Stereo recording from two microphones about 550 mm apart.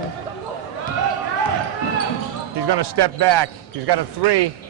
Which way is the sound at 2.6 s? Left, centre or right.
Right.